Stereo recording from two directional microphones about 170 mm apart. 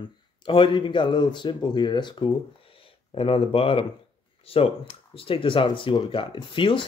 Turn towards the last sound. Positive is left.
turn(degrees=30)  # may be behind; listen again after turning